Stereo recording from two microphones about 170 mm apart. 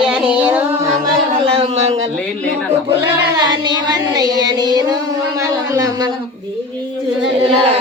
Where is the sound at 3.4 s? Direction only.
25° right (ahead or behind).